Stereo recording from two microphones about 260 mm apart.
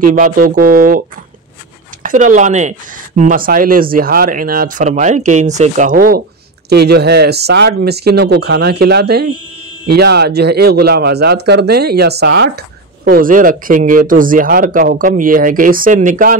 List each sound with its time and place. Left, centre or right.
0.0 s speech: right
2.0 s speech: right